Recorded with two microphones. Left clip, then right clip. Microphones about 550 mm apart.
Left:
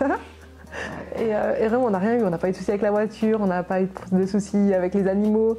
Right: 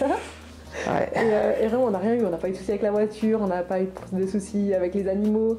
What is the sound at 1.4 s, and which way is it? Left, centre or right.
Speech, left.